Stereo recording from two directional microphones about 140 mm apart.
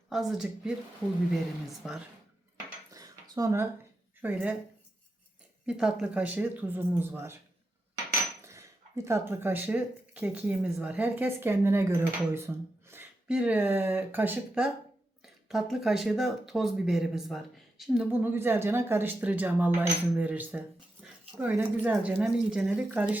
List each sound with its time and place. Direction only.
0.1 s speech: centre (ahead or behind)
1.8 s speech: 5° right (ahead or behind)
2.9 s a sound: 25° right (ahead or behind)
4.2 s speech: 10° right (ahead or behind)
5.6 s speech: 5° right (ahead or behind)
8.4 s speech: 20° right (ahead or behind)